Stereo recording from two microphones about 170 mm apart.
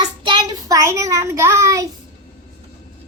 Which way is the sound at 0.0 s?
25° right (ahead or behind).